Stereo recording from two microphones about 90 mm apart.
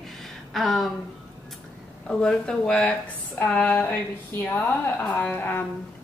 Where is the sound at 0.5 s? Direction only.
Centre (ahead or behind).